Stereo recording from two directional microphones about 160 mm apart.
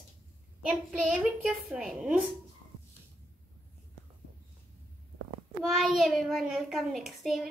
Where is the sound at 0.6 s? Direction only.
5° right (ahead or behind).